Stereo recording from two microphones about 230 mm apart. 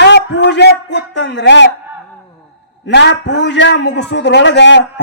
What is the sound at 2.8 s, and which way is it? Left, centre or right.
Speech, left.